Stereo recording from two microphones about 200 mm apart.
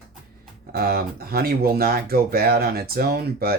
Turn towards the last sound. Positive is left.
turn(degrees=-50)  # may be behind; listen again after turning